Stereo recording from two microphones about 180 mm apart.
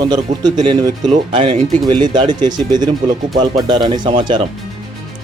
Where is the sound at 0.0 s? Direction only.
20° right (ahead or behind).